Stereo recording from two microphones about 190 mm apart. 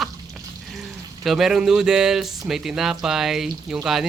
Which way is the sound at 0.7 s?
Centre (ahead or behind).